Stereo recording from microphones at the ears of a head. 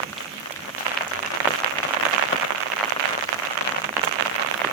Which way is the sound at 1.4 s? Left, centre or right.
Right.